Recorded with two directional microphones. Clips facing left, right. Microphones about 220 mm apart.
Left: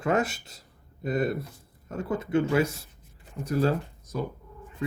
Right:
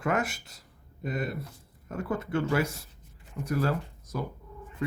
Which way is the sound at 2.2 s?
20° left (ahead or behind).